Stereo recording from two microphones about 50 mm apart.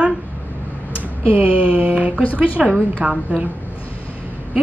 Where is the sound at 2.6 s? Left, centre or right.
Centre.